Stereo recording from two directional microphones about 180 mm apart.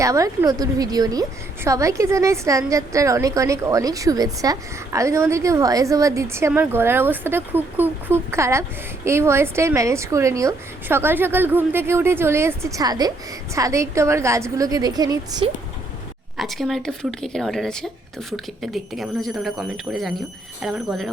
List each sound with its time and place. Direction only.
0.0 s a woman's voice: 15° right (ahead or behind)
16.4 s speech: centre (ahead or behind)